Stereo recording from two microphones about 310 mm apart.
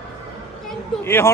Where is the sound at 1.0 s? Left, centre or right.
Centre.